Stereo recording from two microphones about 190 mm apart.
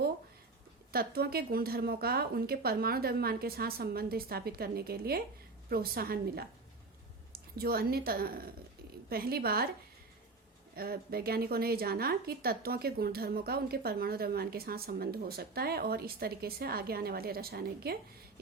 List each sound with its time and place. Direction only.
0.9 s a woman's voice: 55° right (ahead or behind)
10.8 s a woman's voice: 55° right (ahead or behind)